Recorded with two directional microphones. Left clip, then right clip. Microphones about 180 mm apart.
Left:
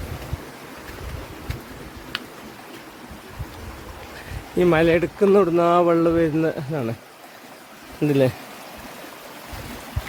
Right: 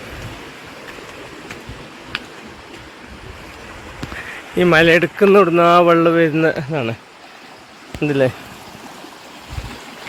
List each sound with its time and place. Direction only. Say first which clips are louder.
4.5 s speech: right 6 dB; centre (ahead or behind)
6.5 s speech: right 6 dB; 15° right (ahead or behind)
8.0 s speech: right 3 dB; 20° left (ahead or behind)